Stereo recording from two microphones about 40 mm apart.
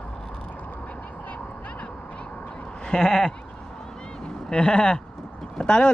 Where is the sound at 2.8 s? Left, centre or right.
Centre.